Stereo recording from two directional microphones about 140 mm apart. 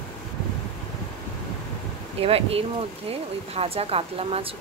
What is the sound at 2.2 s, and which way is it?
Speech, 45° right (ahead or behind).